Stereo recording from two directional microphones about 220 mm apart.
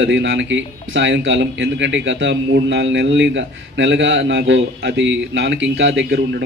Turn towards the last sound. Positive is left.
turn(degrees=-50)  # may be behind; listen again after turning